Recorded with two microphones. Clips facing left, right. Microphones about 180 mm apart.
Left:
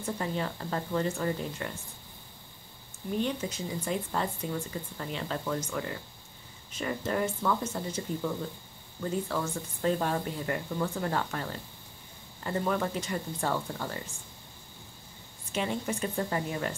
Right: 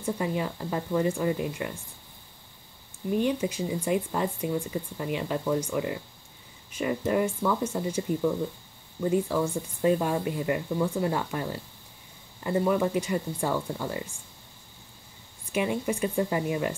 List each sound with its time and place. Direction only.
0.0 s speech: 10° right (ahead or behind)
3.2 s speech: 10° right (ahead or behind)
15.5 s speech: 10° right (ahead or behind)